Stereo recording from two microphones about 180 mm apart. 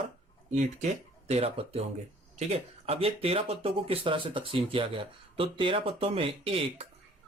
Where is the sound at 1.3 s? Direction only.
35° right (ahead or behind).